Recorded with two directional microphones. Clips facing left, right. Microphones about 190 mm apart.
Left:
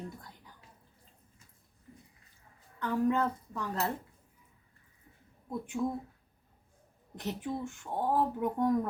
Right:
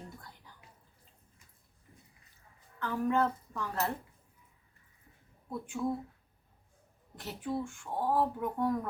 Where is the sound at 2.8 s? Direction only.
15° left (ahead or behind).